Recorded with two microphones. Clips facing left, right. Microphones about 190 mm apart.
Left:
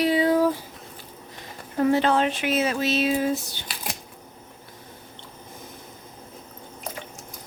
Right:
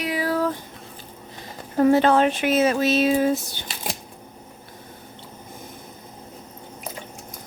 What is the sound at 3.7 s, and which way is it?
Camera, 25° right (ahead or behind).